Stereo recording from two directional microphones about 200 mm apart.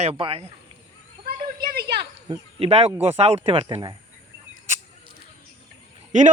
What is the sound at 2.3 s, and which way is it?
Speech, 30° right (ahead or behind).